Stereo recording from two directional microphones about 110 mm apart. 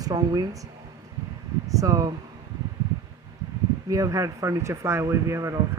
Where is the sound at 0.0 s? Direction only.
35° right (ahead or behind).